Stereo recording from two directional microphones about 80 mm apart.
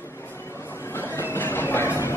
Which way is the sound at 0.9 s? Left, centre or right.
Left.